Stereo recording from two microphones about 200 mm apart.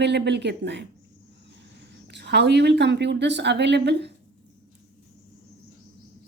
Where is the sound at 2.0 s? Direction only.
60° right (ahead or behind).